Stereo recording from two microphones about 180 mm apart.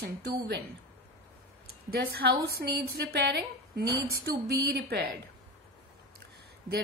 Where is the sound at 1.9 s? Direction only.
65° right (ahead or behind).